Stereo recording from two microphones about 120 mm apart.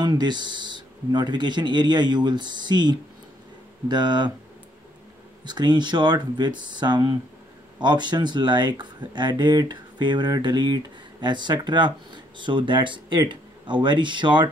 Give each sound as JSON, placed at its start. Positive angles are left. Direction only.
{"t": 0.0, "sound": "speech", "side_deg": -35}
{"t": 5.4, "sound": "speech", "side_deg": -35}